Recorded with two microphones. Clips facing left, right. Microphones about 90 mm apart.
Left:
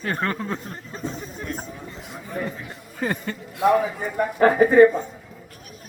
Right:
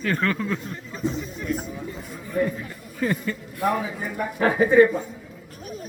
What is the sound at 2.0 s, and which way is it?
Chatter, 70° left (ahead or behind).